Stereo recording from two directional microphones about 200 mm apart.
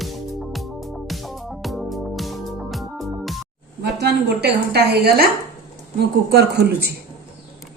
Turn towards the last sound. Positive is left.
turn(degrees=-55)  # may be behind; listen again after turning